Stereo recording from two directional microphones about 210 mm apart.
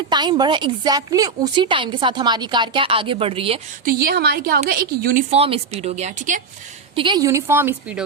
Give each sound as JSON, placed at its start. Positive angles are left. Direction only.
{"t": 0.1, "sound": "speech", "side_deg": -20}
{"t": 3.8, "sound": "a woman's voice", "side_deg": -50}
{"t": 5.3, "sound": "speech", "side_deg": -30}
{"t": 6.9, "sound": "a woman's voice", "side_deg": -20}